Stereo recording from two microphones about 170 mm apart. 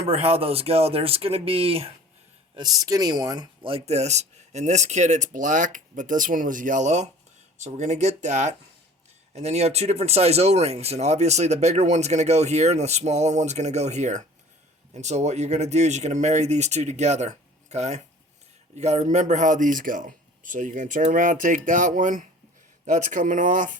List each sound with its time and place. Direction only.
0.0 s speech: 35° right (ahead or behind)
2.6 s speech: 20° right (ahead or behind); by 23.7 s 50° right (ahead or behind)